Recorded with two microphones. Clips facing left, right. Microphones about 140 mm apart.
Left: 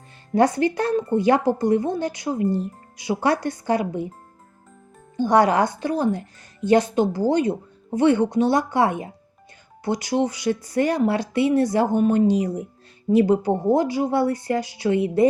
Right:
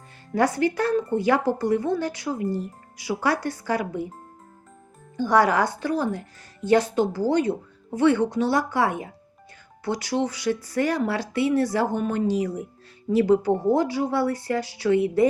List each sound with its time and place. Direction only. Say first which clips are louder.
0.3 s speech: left 3 dB; 20° left (ahead or behind)
5.1 s speech: left 2 dB; 20° left (ahead or behind)